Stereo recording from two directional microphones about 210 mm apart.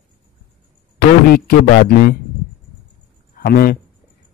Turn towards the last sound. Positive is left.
turn(degrees=45)  # may be behind; listen again after turning